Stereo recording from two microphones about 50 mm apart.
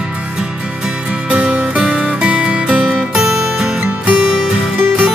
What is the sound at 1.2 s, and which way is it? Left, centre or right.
Music, right.